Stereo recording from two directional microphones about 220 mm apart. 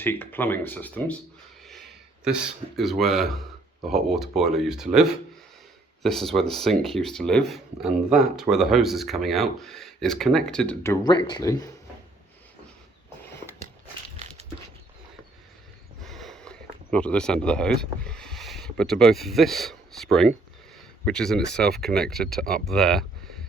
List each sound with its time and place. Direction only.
0.0 s speech: 10° left (ahead or behind)
11.0 s speech: 20° left (ahead or behind)
14.2 s dog: 30° right (ahead or behind)
16.0 s speech: centre (ahead or behind)